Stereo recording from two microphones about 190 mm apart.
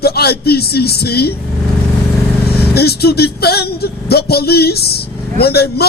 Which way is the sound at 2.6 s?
55° left (ahead or behind).